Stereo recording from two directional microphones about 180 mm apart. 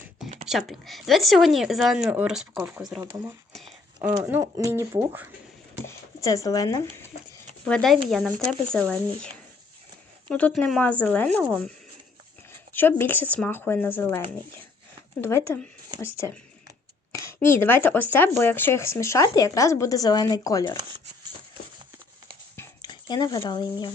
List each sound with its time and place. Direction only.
0.4 s a woman's voice: centre (ahead or behind)
3.5 s a sound: centre (ahead or behind)
4.2 s speech: 15° right (ahead or behind)
5.8 s speech: 15° left (ahead or behind)
7.7 s a woman's voice: 5° left (ahead or behind)
12.7 s speech: 10° left (ahead or behind)
22.5 s a sound: 25° left (ahead or behind)